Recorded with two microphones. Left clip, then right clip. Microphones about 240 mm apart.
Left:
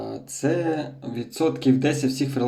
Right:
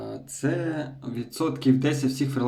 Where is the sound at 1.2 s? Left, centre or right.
Right.